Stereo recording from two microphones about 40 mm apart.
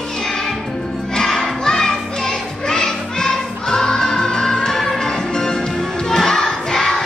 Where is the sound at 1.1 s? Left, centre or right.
Centre.